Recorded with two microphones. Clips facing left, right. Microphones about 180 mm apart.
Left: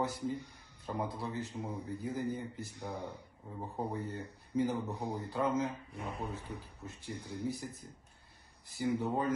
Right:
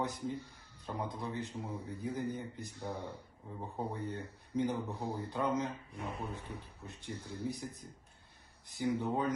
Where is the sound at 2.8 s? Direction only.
15° left (ahead or behind).